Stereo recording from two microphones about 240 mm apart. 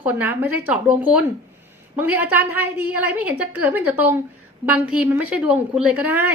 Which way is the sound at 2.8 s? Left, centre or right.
Left.